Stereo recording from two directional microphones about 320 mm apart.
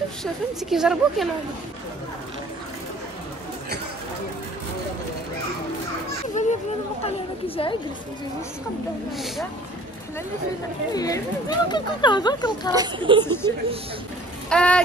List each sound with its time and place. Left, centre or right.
0.2 s a woman's voice: centre
6.4 s a child's voice: left
10.9 s speech: centre
12.7 s speech: centre
13.2 s speech: centre
14.5 s a woman's voice: centre